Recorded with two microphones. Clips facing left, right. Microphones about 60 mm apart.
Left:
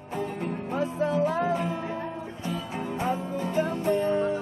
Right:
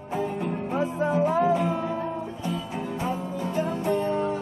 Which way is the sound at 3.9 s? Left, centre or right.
Left.